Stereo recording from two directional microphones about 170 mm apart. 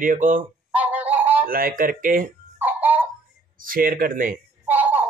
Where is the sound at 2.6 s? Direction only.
10° right (ahead or behind).